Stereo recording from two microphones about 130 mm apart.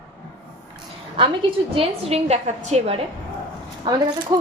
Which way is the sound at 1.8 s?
55° right (ahead or behind).